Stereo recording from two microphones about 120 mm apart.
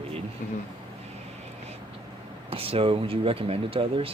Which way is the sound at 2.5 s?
50° right (ahead or behind).